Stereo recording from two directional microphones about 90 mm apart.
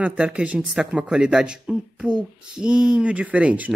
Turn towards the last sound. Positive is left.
turn(degrees=-15)  # may be behind; listen again after turning